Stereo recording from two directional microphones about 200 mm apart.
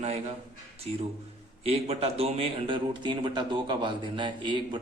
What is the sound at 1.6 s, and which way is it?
A man's voice, 30° right (ahead or behind).